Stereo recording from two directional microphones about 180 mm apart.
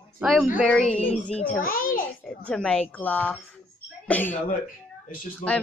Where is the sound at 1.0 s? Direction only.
35° left (ahead or behind).